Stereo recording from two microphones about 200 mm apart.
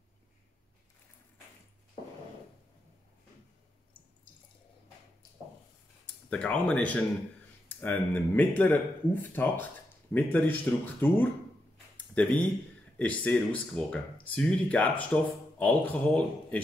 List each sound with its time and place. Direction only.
6.3 s speech: 5° left (ahead or behind)